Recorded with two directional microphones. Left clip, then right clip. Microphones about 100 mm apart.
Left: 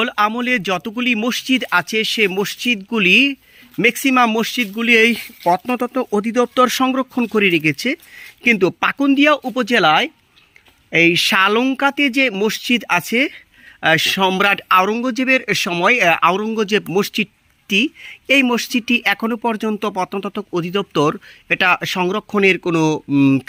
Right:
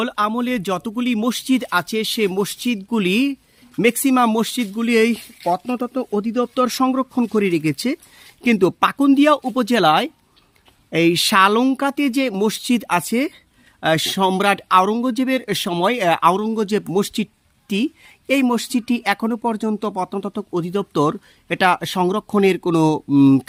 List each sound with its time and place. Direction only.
0.0 s speech: 25° right (ahead or behind)
4.8 s speech: 20° right (ahead or behind)
5.5 s speech: 10° left (ahead or behind)
6.8 s speech: 15° right (ahead or behind); by 7.9 s 40° right (ahead or behind)
8.4 s speech: 50° right (ahead or behind)
11.3 s speech: 35° right (ahead or behind)
11.6 s speech: 45° right (ahead or behind); by 14.8 s 25° right (ahead or behind)
14.8 s speech: 40° right (ahead or behind)
16.6 s speech: 20° right (ahead or behind); by 23.0 s 45° right (ahead or behind)
23.1 s speech: 60° right (ahead or behind)